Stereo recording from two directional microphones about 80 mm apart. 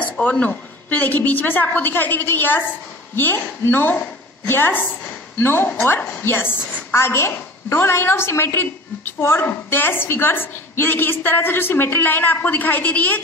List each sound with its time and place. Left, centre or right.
0.0 s a woman's voice: left